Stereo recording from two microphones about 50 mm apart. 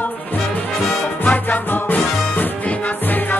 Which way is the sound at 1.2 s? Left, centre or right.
Left.